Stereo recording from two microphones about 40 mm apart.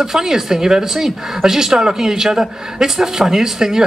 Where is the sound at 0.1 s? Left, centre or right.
Centre.